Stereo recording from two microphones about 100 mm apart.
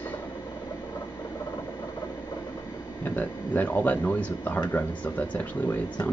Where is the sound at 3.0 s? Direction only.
20° left (ahead or behind).